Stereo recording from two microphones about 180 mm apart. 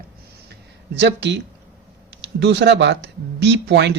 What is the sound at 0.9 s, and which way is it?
Speech, 70° right (ahead or behind).